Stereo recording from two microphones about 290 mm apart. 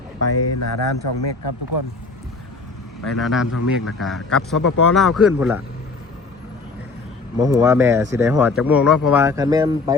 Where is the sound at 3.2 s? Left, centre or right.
Centre.